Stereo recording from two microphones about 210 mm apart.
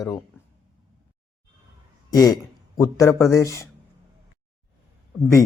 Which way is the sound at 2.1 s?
15° left (ahead or behind).